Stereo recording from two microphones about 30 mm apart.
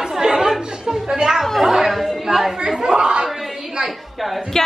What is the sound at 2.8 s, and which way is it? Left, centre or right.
Speech, right.